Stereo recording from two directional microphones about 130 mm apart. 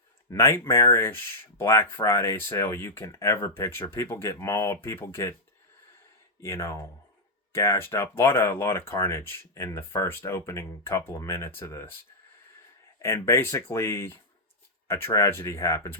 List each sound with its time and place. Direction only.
0.3 s speech: 20° left (ahead or behind)
6.4 s speech: 20° left (ahead or behind)
13.0 s speech: 20° left (ahead or behind)